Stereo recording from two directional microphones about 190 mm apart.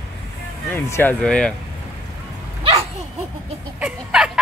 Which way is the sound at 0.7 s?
10° left (ahead or behind).